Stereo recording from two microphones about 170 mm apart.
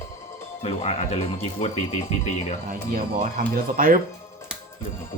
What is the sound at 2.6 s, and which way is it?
Speech, 50° right (ahead or behind).